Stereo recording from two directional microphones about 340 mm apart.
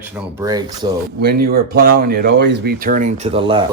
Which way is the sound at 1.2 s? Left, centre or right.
Right.